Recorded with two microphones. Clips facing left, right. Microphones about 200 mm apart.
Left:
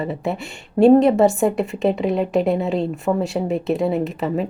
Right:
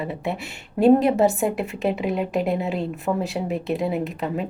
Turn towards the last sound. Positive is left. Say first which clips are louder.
# left 4 dB
turn(degrees=0)  # may be behind; listen again after turning